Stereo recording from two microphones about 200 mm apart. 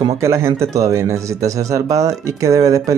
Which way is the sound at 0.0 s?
15° right (ahead or behind).